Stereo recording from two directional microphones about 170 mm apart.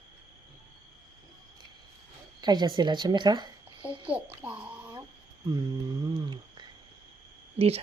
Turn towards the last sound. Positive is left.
turn(degrees=-35)  # may be behind; listen again after turning